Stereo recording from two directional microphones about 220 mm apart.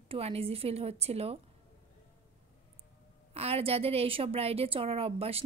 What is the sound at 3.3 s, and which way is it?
A woman's voice, 25° right (ahead or behind).